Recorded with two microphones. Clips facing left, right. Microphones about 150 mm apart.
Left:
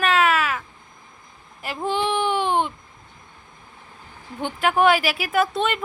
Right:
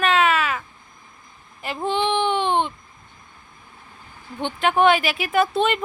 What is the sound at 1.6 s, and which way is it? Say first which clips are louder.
Speech: right 1 dB; 10° left (ahead or behind).